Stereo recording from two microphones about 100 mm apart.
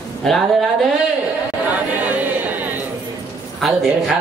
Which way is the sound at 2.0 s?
15° right (ahead or behind).